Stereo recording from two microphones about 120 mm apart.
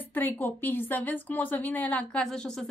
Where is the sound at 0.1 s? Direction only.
15° left (ahead or behind).